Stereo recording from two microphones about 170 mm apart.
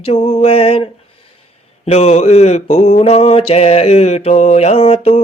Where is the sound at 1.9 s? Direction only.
40° left (ahead or behind).